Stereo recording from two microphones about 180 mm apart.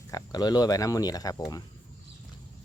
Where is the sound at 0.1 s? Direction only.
20° left (ahead or behind).